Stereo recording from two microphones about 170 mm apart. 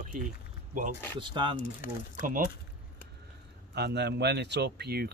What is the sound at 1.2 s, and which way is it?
Speech, 30° right (ahead or behind).